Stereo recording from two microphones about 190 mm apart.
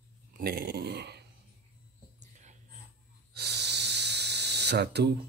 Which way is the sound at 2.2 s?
40° right (ahead or behind).